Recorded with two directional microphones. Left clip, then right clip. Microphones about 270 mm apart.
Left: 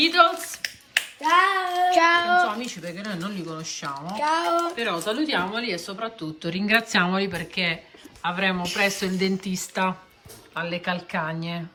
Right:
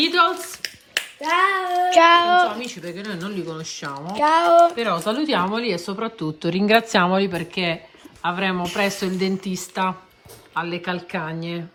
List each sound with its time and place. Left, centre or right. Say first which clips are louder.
0.0 s finger snapping: even; centre
1.2 s hands: even; centre
1.9 s child singing: right 6 dB; right
2.5 s speech: right 1 dB; centre
4.1 s speech: right 8 dB; right
4.8 s speech: right 3 dB; centre